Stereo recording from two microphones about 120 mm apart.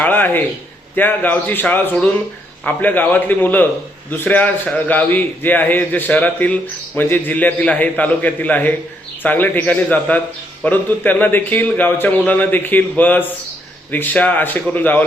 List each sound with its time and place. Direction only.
0.0 s a man's voice: 15° left (ahead or behind)